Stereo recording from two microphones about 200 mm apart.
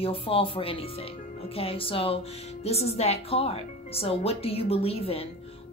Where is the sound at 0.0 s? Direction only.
30° left (ahead or behind).